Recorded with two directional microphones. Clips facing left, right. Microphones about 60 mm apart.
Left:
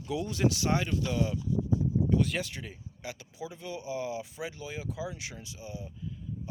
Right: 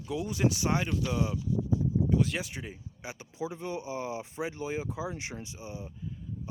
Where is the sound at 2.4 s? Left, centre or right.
Centre.